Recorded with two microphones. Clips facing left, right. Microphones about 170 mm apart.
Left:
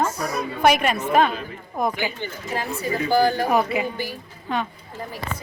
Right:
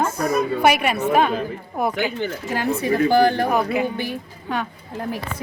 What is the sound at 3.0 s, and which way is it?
Speech, 60° right (ahead or behind).